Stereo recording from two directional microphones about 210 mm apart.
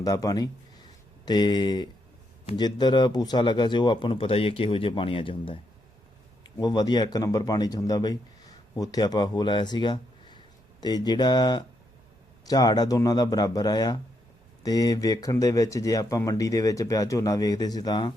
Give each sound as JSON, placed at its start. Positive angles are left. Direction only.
{"t": 0.0, "sound": "speech", "side_deg": 15}
{"t": 6.6, "sound": "a man's voice", "side_deg": 20}